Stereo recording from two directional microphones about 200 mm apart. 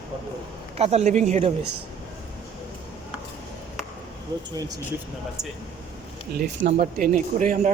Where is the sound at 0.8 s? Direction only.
30° right (ahead or behind).